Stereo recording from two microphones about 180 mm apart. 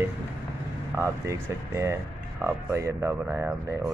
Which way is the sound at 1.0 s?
15° right (ahead or behind).